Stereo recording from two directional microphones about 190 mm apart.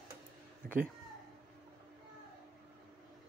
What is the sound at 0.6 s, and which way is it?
Speech, 50° right (ahead or behind).